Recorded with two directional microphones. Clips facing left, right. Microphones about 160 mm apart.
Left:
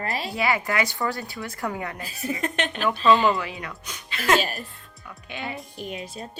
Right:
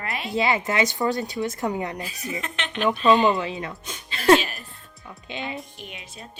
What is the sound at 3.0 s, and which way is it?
A woman's voice, 20° right (ahead or behind).